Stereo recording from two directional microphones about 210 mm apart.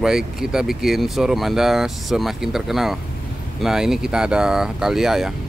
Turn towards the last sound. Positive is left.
turn(degrees=0)  # may be behind; listen again after turning